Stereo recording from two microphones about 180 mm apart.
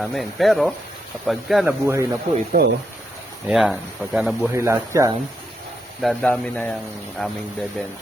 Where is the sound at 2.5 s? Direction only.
60° right (ahead or behind).